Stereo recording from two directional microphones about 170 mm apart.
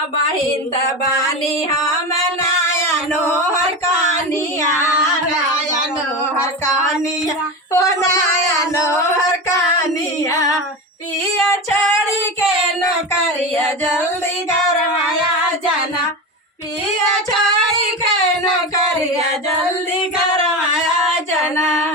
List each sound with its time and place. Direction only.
7.7 s female singing: 20° left (ahead or behind)
21.5 s carnatic music: 15° left (ahead or behind)